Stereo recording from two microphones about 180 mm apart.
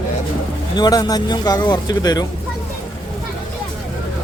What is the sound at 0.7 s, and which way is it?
Speech, 20° left (ahead or behind).